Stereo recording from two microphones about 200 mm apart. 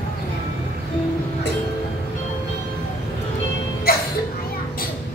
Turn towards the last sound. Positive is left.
turn(degrees=50)  # may be behind; listen again after turning